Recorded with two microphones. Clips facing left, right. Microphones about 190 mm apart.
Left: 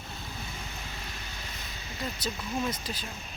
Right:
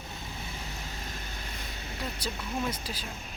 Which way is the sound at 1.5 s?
60° right (ahead or behind).